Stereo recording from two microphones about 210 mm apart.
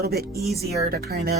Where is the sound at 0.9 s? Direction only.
45° right (ahead or behind).